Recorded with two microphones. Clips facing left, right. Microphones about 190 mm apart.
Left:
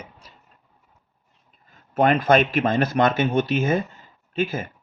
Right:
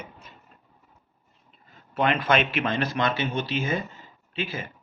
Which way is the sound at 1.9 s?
45° left (ahead or behind).